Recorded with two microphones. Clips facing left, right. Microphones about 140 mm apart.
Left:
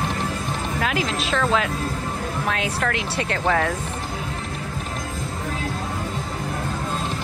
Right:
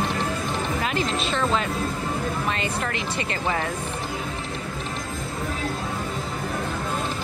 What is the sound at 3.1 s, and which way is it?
Speech, 75° left (ahead or behind).